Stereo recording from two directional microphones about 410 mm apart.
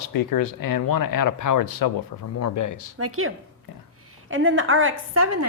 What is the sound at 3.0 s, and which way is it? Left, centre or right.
A woman's voice, right.